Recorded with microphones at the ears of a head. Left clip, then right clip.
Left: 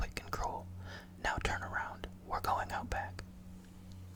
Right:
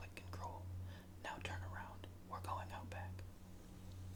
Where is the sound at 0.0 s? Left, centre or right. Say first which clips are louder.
Left 12 dB; left.